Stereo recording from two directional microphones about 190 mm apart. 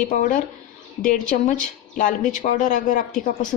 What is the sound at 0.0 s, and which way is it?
A woman's voice, 40° left (ahead or behind).